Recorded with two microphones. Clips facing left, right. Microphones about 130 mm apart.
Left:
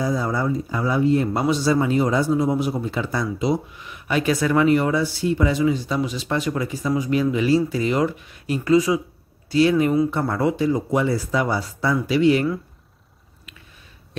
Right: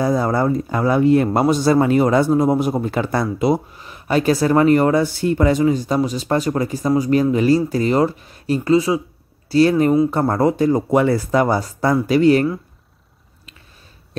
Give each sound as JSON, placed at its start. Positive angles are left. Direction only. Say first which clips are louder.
{"t": 0.0, "sound": "a man's voice", "louder": "right 5 dB", "side_deg": -55}
{"t": 3.7, "sound": "speech", "louder": "right 4 dB", "side_deg": -35}
{"t": 9.5, "sound": "speech", "louder": "right 3 dB", "side_deg": -40}